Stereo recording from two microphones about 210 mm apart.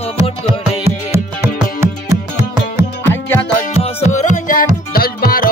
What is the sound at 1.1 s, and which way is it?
Music, 10° right (ahead or behind).